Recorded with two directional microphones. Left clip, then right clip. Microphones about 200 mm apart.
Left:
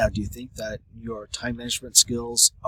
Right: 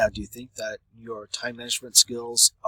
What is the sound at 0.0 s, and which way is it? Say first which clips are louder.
Speech: even; 5° left (ahead or behind).